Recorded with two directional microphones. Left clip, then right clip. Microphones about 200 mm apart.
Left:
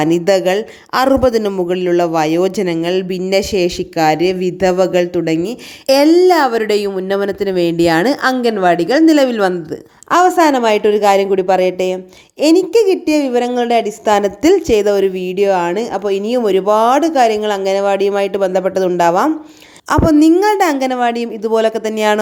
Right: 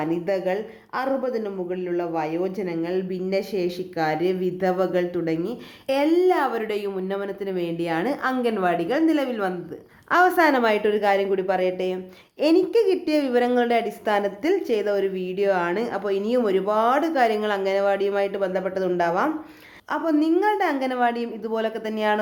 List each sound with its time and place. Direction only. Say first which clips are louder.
0.0 s speech: left 12 dB; 55° left (ahead or behind)
10.1 s a woman's voice: left 7 dB; 30° left (ahead or behind)